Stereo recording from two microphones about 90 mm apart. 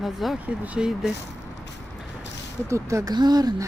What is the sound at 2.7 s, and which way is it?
Speech, 35° right (ahead or behind).